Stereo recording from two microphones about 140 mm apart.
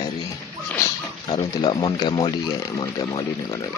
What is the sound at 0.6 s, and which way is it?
Speech, 15° left (ahead or behind).